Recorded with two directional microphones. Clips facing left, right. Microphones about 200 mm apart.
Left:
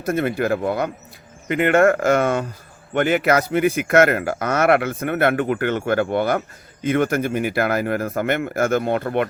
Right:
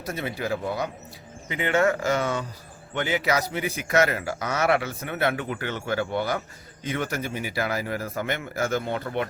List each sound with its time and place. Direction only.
0.0 s speech: 55° left (ahead or behind)